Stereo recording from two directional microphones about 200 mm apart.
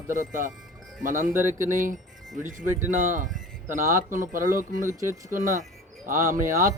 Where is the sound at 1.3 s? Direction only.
10° right (ahead or behind).